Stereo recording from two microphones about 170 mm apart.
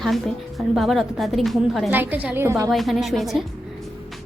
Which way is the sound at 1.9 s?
10° right (ahead or behind).